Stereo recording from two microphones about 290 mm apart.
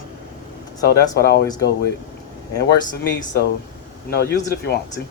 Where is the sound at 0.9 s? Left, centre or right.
Left.